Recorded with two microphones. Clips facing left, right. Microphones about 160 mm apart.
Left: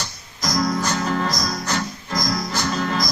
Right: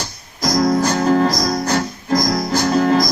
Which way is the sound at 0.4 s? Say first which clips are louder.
Right 6 dB; 35° right (ahead or behind).